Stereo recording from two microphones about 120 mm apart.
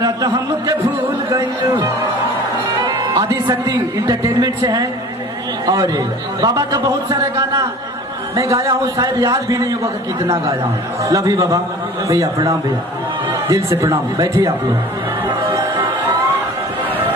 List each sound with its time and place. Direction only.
0.0 s a sound: 30° right (ahead or behind)
1.3 s music: 25° right (ahead or behind)
2.8 s a man's voice: 35° right (ahead or behind)